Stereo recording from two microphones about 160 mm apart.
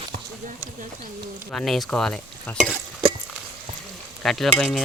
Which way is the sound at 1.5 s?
Centre (ahead or behind).